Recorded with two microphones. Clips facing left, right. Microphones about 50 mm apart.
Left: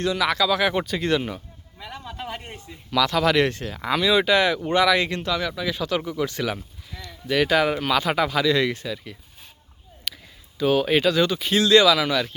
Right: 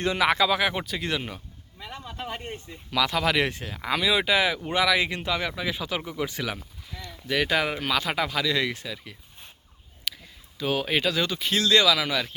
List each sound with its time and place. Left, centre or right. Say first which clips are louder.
0.0 s speech: even; right
0.6 s speech: left 4 dB; centre
1.8 s a sound: left 2 dB; centre
2.6 s speech: left 4 dB; centre
10.1 s a sound: left 1 dB; centre
10.6 s speech: left 6 dB; centre